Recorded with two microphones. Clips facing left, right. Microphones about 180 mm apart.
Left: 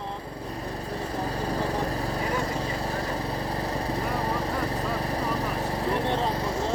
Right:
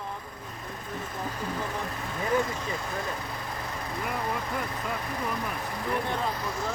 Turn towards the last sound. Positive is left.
turn(degrees=35)  # may be behind; listen again after turning